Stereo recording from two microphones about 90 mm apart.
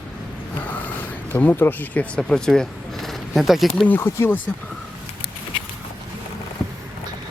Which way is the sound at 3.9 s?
25° left (ahead or behind).